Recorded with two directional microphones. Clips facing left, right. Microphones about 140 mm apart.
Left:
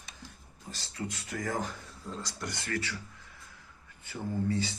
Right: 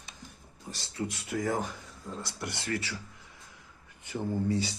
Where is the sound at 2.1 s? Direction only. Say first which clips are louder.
Even; 10° right (ahead or behind).